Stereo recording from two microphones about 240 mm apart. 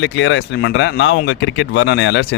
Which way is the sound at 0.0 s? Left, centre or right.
Left.